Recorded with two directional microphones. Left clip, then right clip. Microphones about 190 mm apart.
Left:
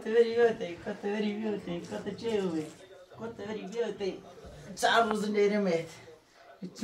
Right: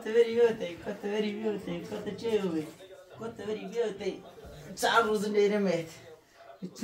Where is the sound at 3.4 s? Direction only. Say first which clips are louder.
Right 2 dB; 15° right (ahead or behind).